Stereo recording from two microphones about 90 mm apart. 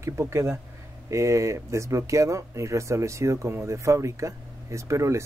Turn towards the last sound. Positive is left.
turn(degrees=-35)  # may be behind; listen again after turning